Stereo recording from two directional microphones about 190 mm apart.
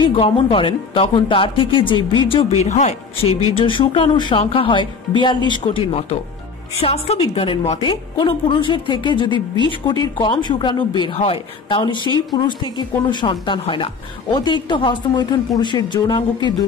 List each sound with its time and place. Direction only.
0.0 s a woman's voice: 30° left (ahead or behind)